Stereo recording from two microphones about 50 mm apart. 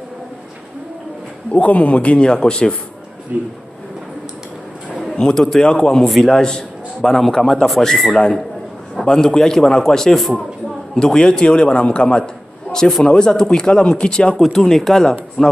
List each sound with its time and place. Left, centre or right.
1.5 s a man's voice: left
3.3 s speech: right
5.0 s a man's voice: centre
11.0 s a man's voice: centre